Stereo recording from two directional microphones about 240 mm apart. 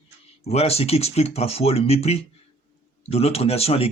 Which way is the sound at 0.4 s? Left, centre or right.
Left.